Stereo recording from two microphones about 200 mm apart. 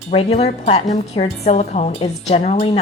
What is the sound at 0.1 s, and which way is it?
A woman's voice, 30° left (ahead or behind).